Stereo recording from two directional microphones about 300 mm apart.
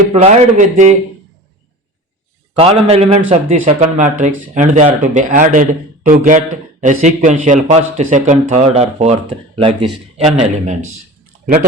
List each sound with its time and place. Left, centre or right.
0.1 s speech: right
2.6 s speech: centre
10.2 s speech: right